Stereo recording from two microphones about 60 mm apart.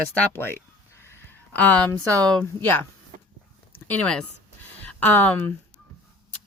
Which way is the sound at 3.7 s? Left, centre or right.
Left.